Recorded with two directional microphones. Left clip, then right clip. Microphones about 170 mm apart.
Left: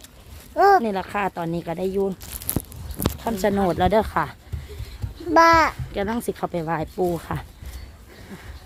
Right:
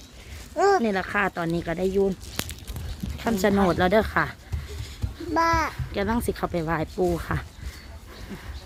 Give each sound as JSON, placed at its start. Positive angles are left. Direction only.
{"t": 0.5, "sound": "a sound", "side_deg": 40}
{"t": 0.9, "sound": "speech", "side_deg": 5}
{"t": 3.2, "sound": "speech", "side_deg": -10}
{"t": 5.3, "sound": "a child's voice", "side_deg": 65}
{"t": 5.9, "sound": "speech", "side_deg": 5}